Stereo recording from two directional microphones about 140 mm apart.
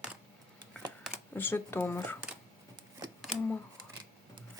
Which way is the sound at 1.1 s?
15° left (ahead or behind).